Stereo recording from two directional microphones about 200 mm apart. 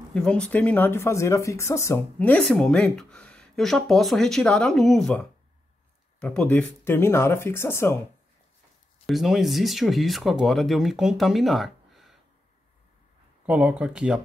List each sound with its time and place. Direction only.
0.1 s speech: 5° left (ahead or behind)
9.0 s speech: centre (ahead or behind)
13.5 s speech: 5° right (ahead or behind)